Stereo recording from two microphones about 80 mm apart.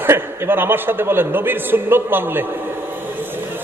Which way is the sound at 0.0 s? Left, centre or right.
Right.